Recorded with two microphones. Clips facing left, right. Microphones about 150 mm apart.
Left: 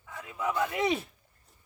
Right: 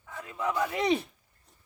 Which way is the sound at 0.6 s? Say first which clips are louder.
Right 2 dB; 5° left (ahead or behind).